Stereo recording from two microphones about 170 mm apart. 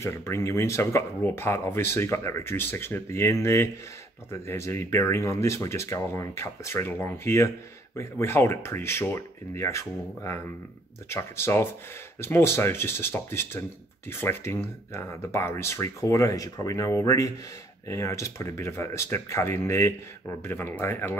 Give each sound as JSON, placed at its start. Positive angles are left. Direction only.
{"t": 0.0, "sound": "speech", "side_deg": 15}